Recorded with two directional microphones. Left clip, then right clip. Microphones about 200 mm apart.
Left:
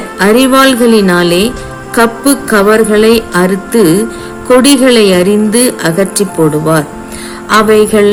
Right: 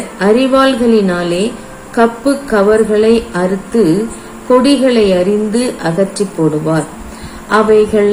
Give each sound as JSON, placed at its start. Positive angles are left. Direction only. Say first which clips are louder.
{"t": 0.2, "sound": "a woman's voice", "louder": "left 3 dB", "side_deg": 55}
{"t": 2.0, "sound": "music", "louder": "left 3 dB", "side_deg": 55}
{"t": 4.4, "sound": "a woman's voice", "louder": "left 4 dB", "side_deg": 55}
{"t": 7.5, "sound": "a woman's voice", "louder": "left 3 dB", "side_deg": 55}